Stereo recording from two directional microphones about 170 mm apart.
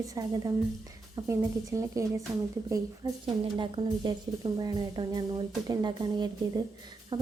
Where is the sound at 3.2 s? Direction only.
30° right (ahead or behind).